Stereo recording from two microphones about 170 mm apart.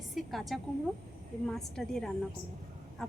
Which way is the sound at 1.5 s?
Centre (ahead or behind).